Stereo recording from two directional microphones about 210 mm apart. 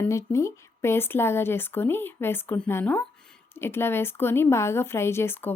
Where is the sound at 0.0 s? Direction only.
15° left (ahead or behind).